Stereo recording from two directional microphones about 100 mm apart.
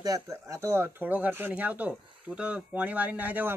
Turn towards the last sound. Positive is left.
turn(degrees=-15)  # may be behind; listen again after turning